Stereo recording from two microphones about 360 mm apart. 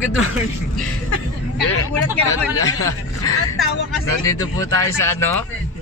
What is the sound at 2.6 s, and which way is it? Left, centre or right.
Speech, centre.